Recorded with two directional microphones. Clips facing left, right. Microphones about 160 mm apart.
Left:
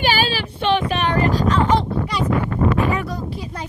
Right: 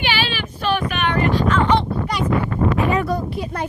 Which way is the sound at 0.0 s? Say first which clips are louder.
Left 3 dB; 40° left (ahead or behind).